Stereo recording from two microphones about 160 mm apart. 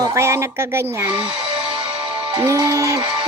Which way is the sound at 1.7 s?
30° right (ahead or behind).